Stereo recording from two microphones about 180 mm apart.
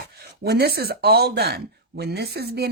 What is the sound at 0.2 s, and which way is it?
Speech, 65° right (ahead or behind).